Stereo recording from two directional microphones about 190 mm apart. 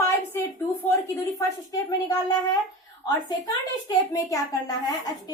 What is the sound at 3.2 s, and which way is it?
A woman's voice, 20° left (ahead or behind).